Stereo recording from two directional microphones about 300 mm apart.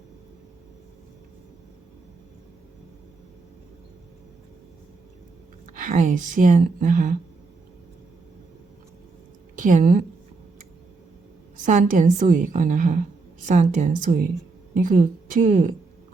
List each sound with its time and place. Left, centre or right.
5.8 s a woman's voice: right
9.6 s a woman's voice: right
11.6 s a woman's voice: right